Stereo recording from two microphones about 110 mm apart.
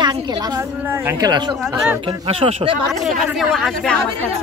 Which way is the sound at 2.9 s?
Centre (ahead or behind).